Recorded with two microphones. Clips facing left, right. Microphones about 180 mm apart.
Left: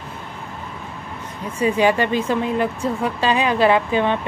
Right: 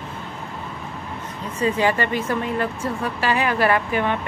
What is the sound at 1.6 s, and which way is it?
Speech, 15° left (ahead or behind).